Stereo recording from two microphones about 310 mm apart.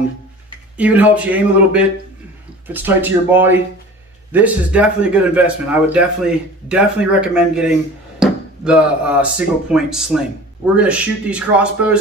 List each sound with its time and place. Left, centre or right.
0.7 s speech: centre